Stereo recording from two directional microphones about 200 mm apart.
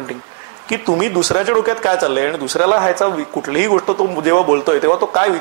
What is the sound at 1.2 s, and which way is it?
Speech, 15° left (ahead or behind).